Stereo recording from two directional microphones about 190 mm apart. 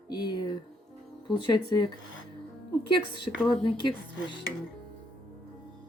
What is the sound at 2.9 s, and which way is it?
Speech, 25° left (ahead or behind).